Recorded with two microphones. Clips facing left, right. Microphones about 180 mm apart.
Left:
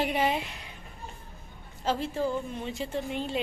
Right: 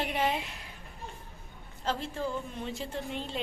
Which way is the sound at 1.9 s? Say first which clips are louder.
Left 4 dB; 5° left (ahead or behind).